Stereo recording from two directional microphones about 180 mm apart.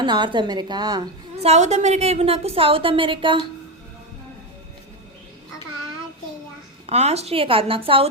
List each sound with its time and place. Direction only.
0.0 s a woman's voice: 25° right (ahead or behind)
1.4 s a woman's voice: 40° right (ahead or behind)
6.8 s a woman's voice: 35° right (ahead or behind)